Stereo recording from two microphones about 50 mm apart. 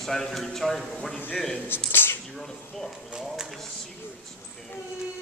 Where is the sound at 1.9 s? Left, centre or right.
Left.